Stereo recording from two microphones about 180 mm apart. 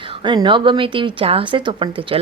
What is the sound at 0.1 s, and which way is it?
Speech, 25° right (ahead or behind).